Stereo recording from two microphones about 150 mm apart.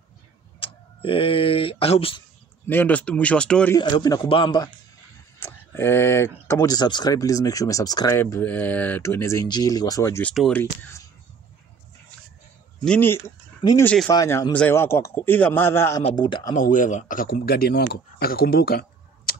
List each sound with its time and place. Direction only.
0.6 s speech: 35° left (ahead or behind)
2.7 s a man's voice: 10° left (ahead or behind)
3.7 s speech: 30° left (ahead or behind)
5.4 s speech: 15° left (ahead or behind)
8.2 s speech: 10° left (ahead or behind)
10.2 s speech: centre (ahead or behind)
10.5 s a man's voice: 15° left (ahead or behind)
12.8 s a man's voice: 10° left (ahead or behind)
14.0 s speech: 25° left (ahead or behind)
14.5 s a man's voice: 10° left (ahead or behind)
16.2 s speech: 30° left (ahead or behind)
16.5 s speech: 60° left (ahead or behind); by 19.3 s 90° left